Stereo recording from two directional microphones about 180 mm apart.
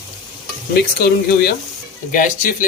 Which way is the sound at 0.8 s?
60° left (ahead or behind).